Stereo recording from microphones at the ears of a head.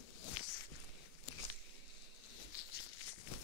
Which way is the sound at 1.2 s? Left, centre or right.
Left.